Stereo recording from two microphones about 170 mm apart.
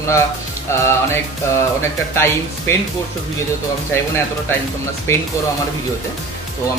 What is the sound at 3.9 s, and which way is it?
Speech, 15° left (ahead or behind).